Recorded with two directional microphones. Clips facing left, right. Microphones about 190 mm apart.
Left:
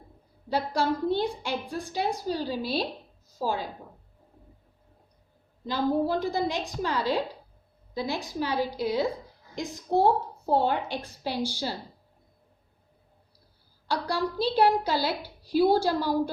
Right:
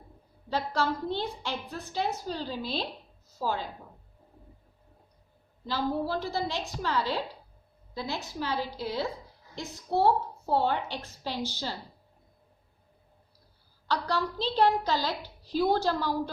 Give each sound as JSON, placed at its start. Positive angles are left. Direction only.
{"t": 0.5, "sound": "a woman's voice", "side_deg": 15}
{"t": 5.6, "sound": "a woman's voice", "side_deg": 20}
{"t": 13.8, "sound": "a woman's voice", "side_deg": 10}